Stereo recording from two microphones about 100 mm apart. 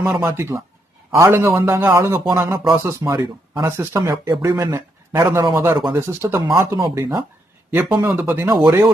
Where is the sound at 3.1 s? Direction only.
40° right (ahead or behind).